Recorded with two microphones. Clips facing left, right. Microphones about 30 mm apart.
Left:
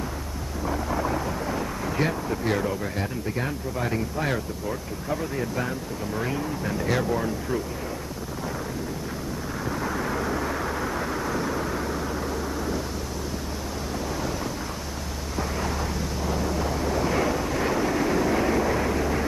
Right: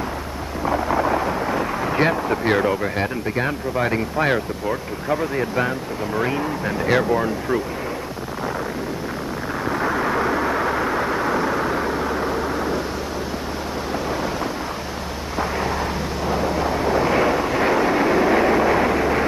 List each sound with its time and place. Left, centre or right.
0.7 s speech: right
9.7 s vehicle: right
15.3 s a sound: right